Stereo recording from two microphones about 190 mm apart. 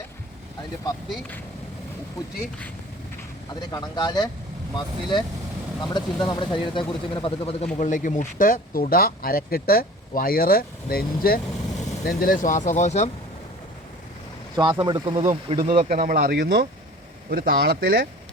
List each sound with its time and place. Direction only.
3.7 s speech: 20° left (ahead or behind)
7.8 s speech: 40° left (ahead or behind)
14.5 s speech: 20° right (ahead or behind)
15.2 s speech: 40° right (ahead or behind)
15.9 s speech: 50° right (ahead or behind)